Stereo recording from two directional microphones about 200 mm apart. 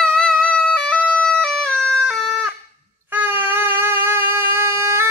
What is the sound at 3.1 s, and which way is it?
Wind instrument, 10° right (ahead or behind).